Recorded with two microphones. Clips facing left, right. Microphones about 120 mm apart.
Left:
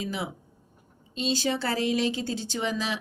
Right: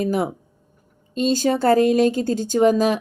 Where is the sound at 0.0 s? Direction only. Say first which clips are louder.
Right 11 dB; 50° right (ahead or behind).